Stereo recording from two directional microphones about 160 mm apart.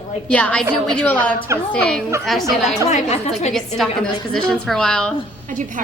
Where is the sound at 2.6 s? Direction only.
45° left (ahead or behind).